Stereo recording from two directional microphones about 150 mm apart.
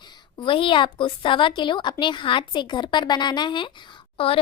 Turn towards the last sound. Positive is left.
turn(degrees=40)  # may be behind; listen again after turning